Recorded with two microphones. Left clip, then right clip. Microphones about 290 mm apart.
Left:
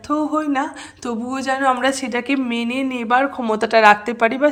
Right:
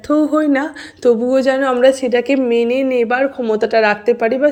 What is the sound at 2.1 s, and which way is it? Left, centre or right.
Speech, left.